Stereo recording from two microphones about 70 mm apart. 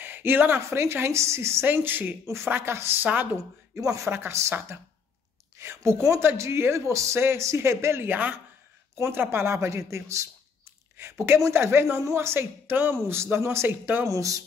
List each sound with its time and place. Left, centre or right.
0.0 s a sound: right
0.6 s speech: right
1.7 s speech: right
3.0 s speech: right
3.8 s a man's voice: right
4.1 s speech: right
5.6 s a man's voice: right
8.1 s speech: right
9.0 s speech: right
14.0 s a man's voice: right